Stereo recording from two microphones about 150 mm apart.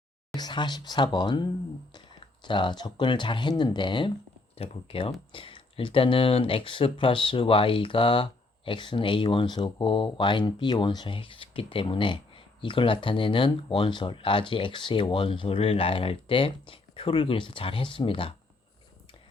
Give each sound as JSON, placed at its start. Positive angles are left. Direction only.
{"t": 0.3, "sound": "speech", "side_deg": 30}